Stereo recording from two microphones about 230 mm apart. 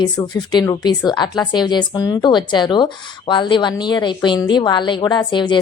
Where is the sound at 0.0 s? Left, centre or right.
Centre.